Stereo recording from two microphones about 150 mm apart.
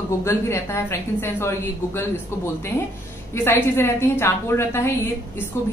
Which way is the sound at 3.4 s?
15° left (ahead or behind).